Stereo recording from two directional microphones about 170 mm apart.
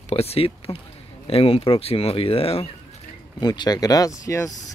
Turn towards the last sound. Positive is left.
turn(degrees=20)  # may be behind; listen again after turning